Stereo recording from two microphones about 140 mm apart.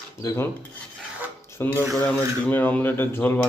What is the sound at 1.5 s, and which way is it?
Speech, 15° left (ahead or behind).